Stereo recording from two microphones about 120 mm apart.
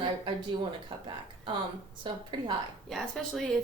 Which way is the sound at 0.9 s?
45° right (ahead or behind).